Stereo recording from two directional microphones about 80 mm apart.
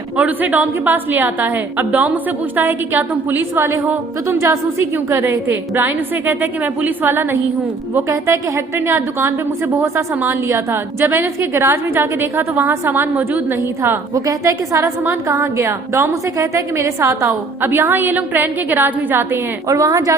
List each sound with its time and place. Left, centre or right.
0.2 s a woman's voice: right
14.1 s a woman's voice: right
17.2 s a woman's voice: right
19.6 s a woman's voice: right